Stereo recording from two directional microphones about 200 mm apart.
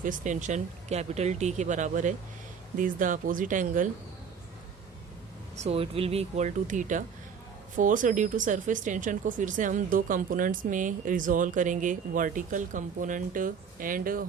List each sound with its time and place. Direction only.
0.0 s speech: 40° right (ahead or behind)
5.5 s speech: 30° right (ahead or behind)